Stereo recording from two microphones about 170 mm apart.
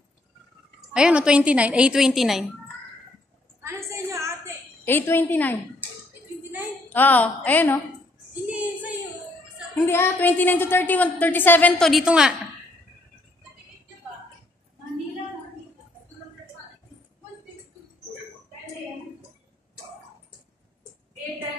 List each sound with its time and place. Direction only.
0.9 s a woman's voice: 5° right (ahead or behind)
3.6 s a sound: 15° right (ahead or behind)
4.8 s a woman's voice: 10° left (ahead or behind)
6.9 s a woman's voice: 10° left (ahead or behind)
8.5 s a sound: 10° right (ahead or behind)
9.8 s a woman's voice: 15° left (ahead or behind); by 12.4 s 5° right (ahead or behind)